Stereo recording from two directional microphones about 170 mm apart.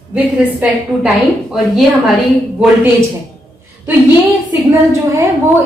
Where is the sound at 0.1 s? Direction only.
5° right (ahead or behind).